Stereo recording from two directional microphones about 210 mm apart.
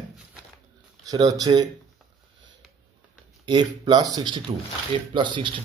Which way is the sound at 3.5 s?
20° right (ahead or behind).